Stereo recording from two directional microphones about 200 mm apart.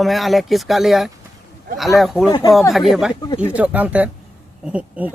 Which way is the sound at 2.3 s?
20° left (ahead or behind).